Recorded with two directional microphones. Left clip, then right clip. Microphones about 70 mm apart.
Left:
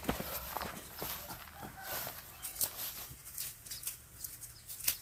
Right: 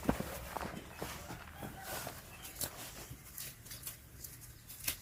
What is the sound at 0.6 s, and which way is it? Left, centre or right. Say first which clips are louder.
Horse: left 1 dB; left.